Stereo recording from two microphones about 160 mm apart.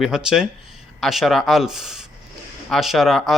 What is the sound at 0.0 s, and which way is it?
Speech, 5° right (ahead or behind).